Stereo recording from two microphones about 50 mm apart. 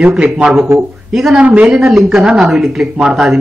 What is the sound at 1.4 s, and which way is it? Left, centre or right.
Speech, right.